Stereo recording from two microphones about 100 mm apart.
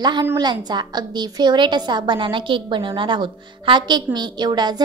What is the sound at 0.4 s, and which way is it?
A woman's voice, 45° right (ahead or behind).